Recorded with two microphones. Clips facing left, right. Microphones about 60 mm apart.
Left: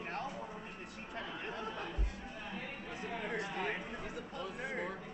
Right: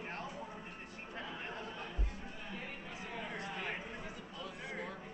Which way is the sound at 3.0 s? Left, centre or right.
Left.